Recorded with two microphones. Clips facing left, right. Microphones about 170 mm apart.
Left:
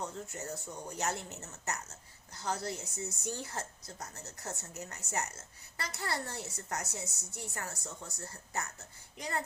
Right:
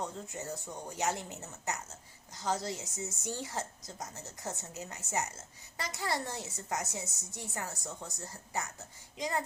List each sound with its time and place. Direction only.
0.0 s speech: 15° right (ahead or behind)